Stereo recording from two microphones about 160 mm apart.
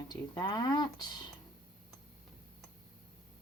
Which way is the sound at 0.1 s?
25° left (ahead or behind).